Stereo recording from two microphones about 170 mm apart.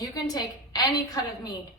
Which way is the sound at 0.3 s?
25° left (ahead or behind).